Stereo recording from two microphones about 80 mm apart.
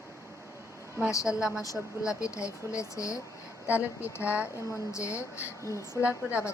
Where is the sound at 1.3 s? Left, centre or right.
Centre.